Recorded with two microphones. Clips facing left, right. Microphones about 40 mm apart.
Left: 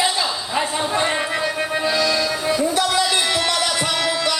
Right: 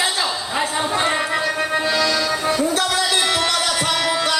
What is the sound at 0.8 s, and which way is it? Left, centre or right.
Music, centre.